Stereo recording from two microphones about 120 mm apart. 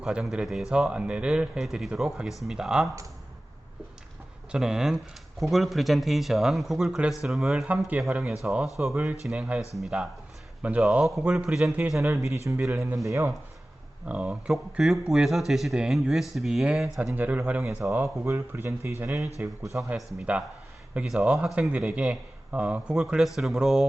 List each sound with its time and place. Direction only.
0.0 s a man's voice: 5° right (ahead or behind)
4.5 s a man's voice: 5° right (ahead or behind)
12.7 s speech: 25° right (ahead or behind)
14.1 s a man's voice: 10° right (ahead or behind)
17.0 s a man's voice: 10° right (ahead or behind)